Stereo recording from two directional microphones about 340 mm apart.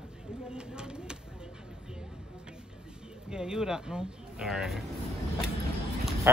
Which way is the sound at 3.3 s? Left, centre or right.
Centre.